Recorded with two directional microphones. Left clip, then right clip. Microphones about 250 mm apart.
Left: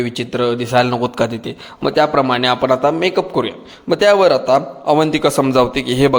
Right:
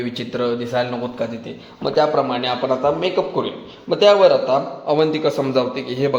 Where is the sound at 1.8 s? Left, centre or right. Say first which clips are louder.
Left 3 dB; left.